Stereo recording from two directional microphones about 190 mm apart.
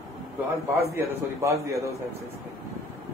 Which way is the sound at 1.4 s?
15° right (ahead or behind).